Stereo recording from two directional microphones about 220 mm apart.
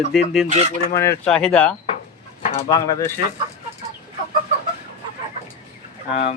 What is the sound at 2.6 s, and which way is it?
Speech, 15° left (ahead or behind).